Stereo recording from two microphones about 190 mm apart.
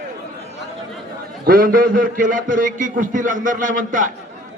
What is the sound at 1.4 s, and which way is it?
A man's voice, 50° right (ahead or behind).